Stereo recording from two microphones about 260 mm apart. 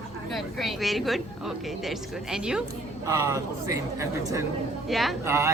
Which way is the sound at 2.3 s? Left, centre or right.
Centre.